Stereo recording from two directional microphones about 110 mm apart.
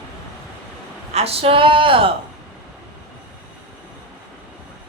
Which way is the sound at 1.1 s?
65° right (ahead or behind).